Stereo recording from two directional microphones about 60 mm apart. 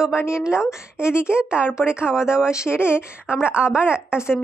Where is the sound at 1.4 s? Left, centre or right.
Centre.